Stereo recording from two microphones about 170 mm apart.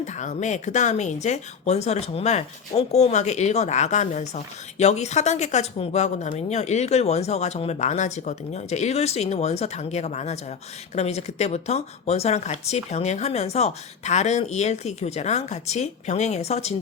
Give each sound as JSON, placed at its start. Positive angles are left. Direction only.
{"t": 0.0, "sound": "speech", "side_deg": 45}